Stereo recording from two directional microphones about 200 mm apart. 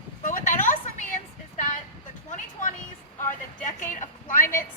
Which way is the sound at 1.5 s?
40° left (ahead or behind).